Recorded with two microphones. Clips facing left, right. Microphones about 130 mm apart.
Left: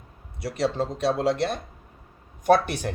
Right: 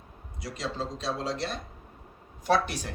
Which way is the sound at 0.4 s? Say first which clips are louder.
Left 8 dB; 60° left (ahead or behind).